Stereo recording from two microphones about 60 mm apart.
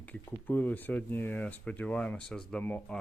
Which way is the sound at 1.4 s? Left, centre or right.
Left.